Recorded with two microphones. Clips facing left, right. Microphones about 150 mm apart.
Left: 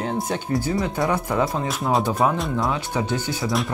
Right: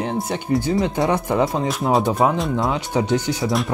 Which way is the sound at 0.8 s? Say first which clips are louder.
Right 3 dB; 20° right (ahead or behind).